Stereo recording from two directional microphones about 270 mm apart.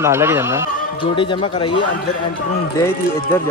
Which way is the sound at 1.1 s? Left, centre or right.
Centre.